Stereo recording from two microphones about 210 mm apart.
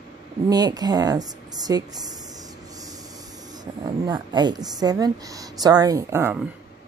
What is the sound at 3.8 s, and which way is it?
Speech, 20° right (ahead or behind).